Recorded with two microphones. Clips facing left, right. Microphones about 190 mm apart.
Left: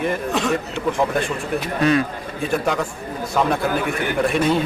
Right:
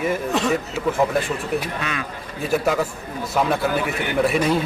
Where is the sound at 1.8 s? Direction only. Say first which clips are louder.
Left 11 dB; 35° left (ahead or behind).